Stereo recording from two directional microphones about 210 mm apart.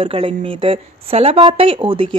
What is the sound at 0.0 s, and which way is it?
A woman's voice, 25° right (ahead or behind).